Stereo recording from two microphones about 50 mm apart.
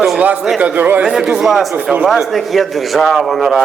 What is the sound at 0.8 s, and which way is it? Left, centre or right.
Speech, right.